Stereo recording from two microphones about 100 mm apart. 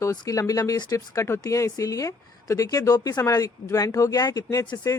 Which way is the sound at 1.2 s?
30° left (ahead or behind).